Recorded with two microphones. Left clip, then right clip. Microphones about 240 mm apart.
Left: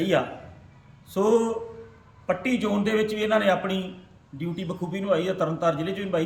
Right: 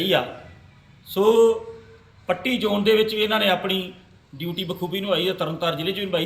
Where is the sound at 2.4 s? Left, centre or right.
Left.